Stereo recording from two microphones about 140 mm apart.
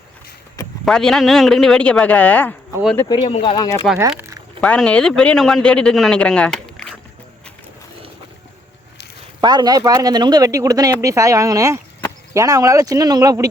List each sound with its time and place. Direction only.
0.9 s speech: 5° left (ahead or behind)
3.2 s speech: 45° left (ahead or behind)
3.5 s speech: 30° left (ahead or behind)
4.6 s speech: 10° left (ahead or behind)
9.4 s speech: 30° right (ahead or behind)